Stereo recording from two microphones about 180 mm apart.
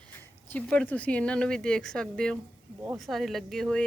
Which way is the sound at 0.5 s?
10° left (ahead or behind).